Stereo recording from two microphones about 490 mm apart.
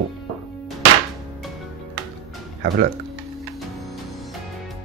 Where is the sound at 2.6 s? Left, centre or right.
Centre.